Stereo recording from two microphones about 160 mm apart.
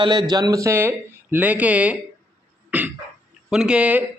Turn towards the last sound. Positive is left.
turn(degrees=-10)  # may be behind; listen again after turning